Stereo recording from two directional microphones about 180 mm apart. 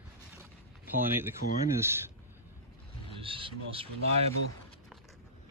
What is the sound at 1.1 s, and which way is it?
Speech, 10° right (ahead or behind).